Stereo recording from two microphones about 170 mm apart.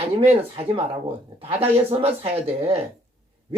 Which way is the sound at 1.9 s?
35° right (ahead or behind).